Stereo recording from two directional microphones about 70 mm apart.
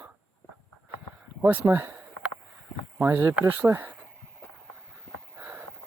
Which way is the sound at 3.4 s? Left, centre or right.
Right.